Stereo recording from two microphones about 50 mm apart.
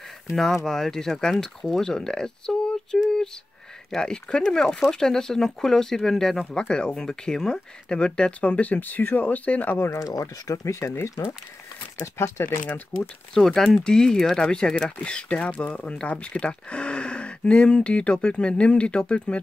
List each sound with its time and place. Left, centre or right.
0.7 s speech: centre; by 9.8 s left
10.5 s speech: left
12.2 s speech: left
13.3 s speech: centre